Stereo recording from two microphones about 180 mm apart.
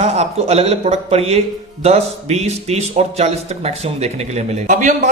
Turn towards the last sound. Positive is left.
turn(degrees=-45)  # may be behind; listen again after turning